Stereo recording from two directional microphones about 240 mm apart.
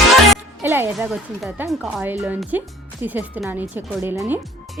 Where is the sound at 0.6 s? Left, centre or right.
Centre.